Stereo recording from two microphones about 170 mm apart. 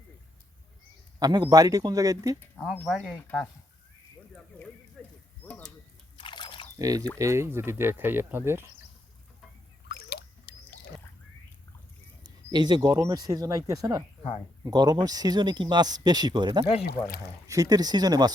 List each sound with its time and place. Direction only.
1.2 s speech: 25° right (ahead or behind)
2.8 s speech: centre (ahead or behind)
5.0 s a sound: centre (ahead or behind)
6.1 s biting: 25° left (ahead or behind)
6.7 s speech: 20° right (ahead or behind)
9.9 s a sound: 70° left (ahead or behind)
12.2 s speech: 25° right (ahead or behind)